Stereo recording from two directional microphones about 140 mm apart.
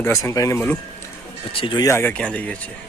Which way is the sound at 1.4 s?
40° left (ahead or behind).